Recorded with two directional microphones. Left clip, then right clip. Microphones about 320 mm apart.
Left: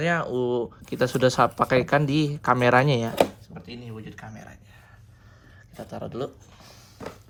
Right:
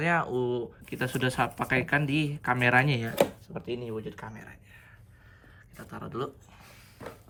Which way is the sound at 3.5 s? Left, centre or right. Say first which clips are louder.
Right 6 dB; centre.